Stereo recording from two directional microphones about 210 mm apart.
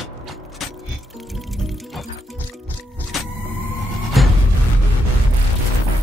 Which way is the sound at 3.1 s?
Centre (ahead or behind).